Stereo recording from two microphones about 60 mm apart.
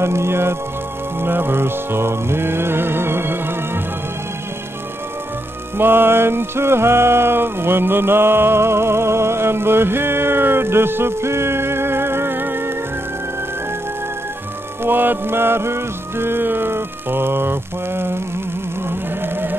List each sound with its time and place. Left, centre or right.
0.0 s music: right
5.8 s music: right
14.8 s music: right